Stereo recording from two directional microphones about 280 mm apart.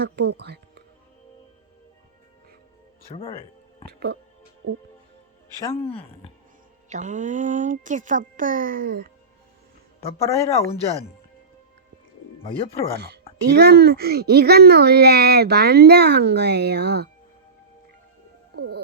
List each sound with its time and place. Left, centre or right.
0.0 s a child's voice: right
3.1 s speech: centre
5.8 s speech: centre
6.9 s a child's voice: right
10.0 s speech: centre
12.4 s speech: centre
13.5 s a child's voice: right
18.5 s speech: right